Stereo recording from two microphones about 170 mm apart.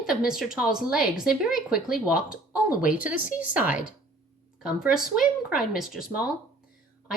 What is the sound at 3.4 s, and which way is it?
Speech, 10° right (ahead or behind).